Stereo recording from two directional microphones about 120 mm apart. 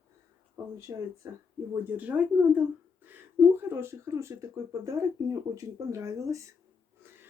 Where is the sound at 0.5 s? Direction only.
25° right (ahead or behind).